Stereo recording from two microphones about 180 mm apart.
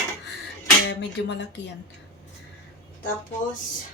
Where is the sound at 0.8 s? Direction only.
75° left (ahead or behind).